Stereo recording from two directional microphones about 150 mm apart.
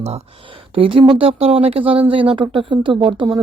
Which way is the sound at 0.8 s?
35° right (ahead or behind).